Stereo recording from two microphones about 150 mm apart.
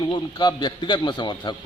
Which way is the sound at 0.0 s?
30° left (ahead or behind).